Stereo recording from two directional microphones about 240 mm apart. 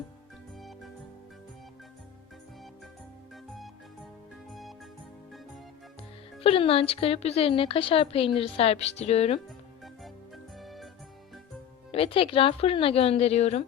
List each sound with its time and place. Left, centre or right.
4.4 s music: centre
6.4 s speech: left
9.8 s music: centre
11.9 s speech: left